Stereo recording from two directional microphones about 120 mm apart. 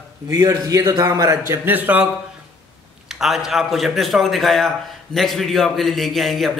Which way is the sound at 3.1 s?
Centre (ahead or behind).